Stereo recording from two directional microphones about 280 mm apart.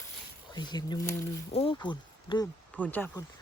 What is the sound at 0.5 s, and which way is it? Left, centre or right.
Speech, centre.